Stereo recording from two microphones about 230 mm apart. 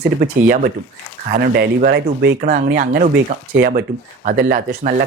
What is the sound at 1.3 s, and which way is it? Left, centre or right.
Speech, right.